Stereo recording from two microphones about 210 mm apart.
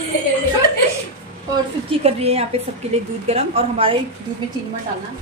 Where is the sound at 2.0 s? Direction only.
30° right (ahead or behind).